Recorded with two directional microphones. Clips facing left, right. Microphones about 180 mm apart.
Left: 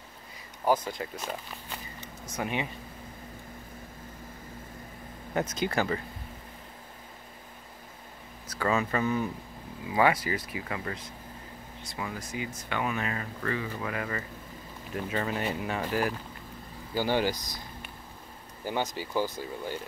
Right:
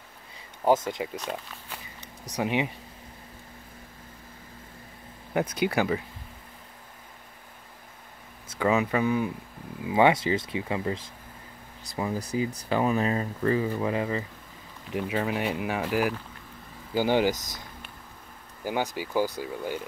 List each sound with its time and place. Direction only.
0.8 s speech: 20° right (ahead or behind)
1.2 s walk: centre (ahead or behind)
2.3 s speech: 15° right (ahead or behind)
5.3 s speech: 10° right (ahead or behind)
8.5 s speech: 15° right (ahead or behind)
9.8 s speech: 25° right (ahead or behind)
11.8 s speech: 35° right (ahead or behind); by 19.8 s 15° right (ahead or behind)